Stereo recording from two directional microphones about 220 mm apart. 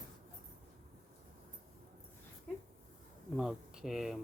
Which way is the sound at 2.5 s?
5° left (ahead or behind).